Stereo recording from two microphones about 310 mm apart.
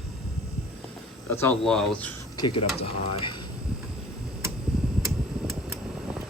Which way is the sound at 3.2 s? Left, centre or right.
Centre.